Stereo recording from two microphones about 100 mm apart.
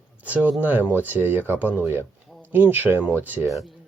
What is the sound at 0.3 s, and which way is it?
Speech, 15° right (ahead or behind).